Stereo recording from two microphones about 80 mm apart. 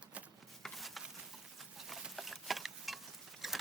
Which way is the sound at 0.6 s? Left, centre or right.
Centre.